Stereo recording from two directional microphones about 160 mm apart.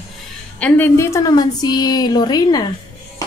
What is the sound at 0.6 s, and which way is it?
A woman's voice, 10° left (ahead or behind).